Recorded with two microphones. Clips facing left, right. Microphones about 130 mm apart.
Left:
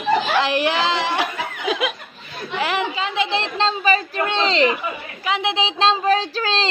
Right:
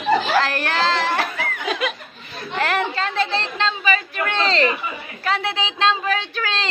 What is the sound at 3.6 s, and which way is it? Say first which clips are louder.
Speech: left 4 dB; 35° left (ahead or behind).